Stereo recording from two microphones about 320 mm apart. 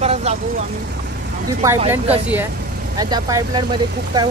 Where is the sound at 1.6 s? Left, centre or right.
Centre.